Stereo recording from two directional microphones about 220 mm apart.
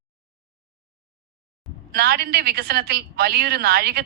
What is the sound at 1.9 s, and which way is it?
A woman's voice, 45° right (ahead or behind).